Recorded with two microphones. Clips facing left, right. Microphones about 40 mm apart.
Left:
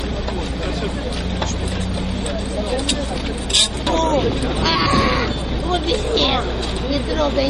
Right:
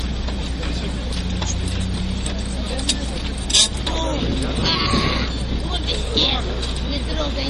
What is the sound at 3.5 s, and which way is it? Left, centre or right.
Vehicle, centre.